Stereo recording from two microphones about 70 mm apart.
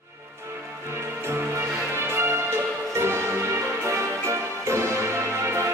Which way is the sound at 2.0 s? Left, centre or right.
Right.